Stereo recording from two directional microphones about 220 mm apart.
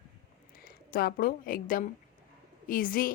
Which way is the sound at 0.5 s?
40° left (ahead or behind).